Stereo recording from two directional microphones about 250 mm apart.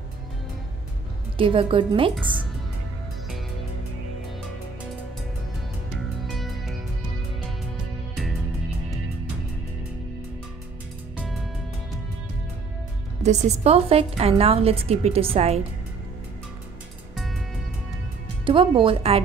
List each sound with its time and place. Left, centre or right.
1.4 s a woman's voice: right
6.2 s music: centre
13.2 s a woman's voice: right
18.4 s a woman's voice: right